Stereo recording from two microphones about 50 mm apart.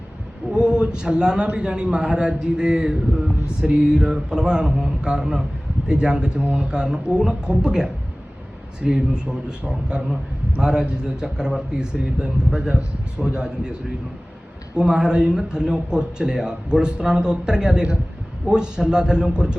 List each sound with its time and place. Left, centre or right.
0.5 s a man's voice: centre
14.8 s a man's voice: centre